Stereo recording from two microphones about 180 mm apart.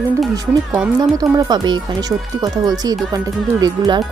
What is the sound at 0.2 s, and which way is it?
Speech, 5° right (ahead or behind).